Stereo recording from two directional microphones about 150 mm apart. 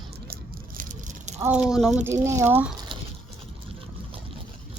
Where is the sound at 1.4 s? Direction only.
10° right (ahead or behind).